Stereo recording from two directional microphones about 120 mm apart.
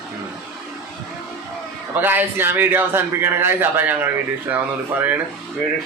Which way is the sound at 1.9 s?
15° right (ahead or behind).